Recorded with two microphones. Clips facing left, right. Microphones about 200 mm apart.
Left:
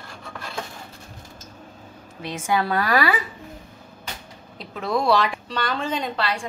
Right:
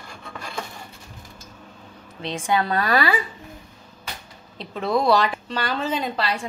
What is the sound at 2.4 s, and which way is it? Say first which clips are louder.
Speech: even; 20° right (ahead or behind).